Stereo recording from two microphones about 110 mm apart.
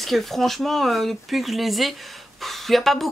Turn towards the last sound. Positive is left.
turn(degrees=0)  # may be behind; listen again after turning